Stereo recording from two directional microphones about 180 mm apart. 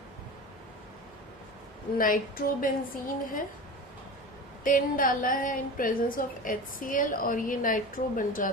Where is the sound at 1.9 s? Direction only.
50° left (ahead or behind).